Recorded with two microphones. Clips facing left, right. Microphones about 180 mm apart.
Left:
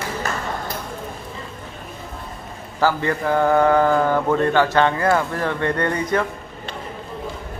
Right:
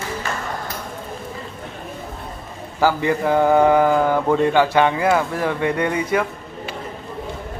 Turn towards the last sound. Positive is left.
turn(degrees=-10)  # may be behind; listen again after turning